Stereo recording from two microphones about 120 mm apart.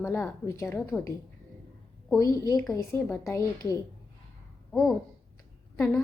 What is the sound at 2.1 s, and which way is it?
A woman's voice, 30° left (ahead or behind).